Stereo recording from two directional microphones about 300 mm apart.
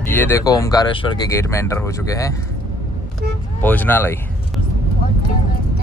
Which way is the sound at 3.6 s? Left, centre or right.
Centre.